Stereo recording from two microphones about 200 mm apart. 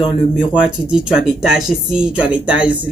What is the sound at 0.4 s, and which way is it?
Speech, 5° right (ahead or behind).